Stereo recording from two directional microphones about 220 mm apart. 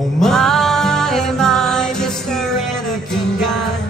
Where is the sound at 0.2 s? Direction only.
Centre (ahead or behind).